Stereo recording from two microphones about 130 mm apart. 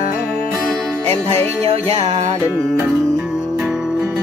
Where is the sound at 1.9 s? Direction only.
50° right (ahead or behind).